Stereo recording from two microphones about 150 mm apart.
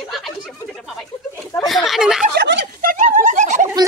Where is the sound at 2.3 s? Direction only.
80° right; by 3.6 s 55° right (ahead or behind).